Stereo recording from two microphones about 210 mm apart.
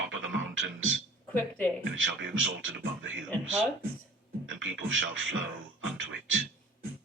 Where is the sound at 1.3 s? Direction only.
10° left (ahead or behind).